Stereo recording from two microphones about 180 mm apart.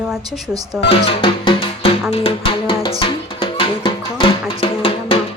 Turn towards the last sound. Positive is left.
turn(degrees=30)  # may be behind; listen again after turning